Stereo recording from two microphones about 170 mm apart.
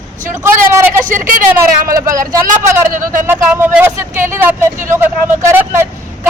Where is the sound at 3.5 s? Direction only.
15° right (ahead or behind).